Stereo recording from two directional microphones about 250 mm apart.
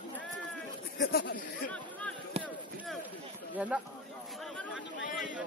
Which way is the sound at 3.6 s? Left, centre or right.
Centre.